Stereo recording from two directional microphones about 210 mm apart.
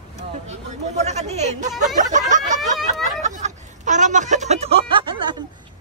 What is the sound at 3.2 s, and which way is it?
Speech, 35° right (ahead or behind).